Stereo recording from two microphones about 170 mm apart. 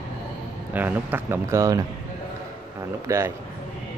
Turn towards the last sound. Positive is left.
turn(degrees=-15)  # may be behind; listen again after turning